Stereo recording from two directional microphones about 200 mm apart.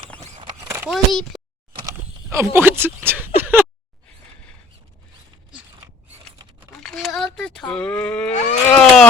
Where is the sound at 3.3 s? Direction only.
10° right (ahead or behind).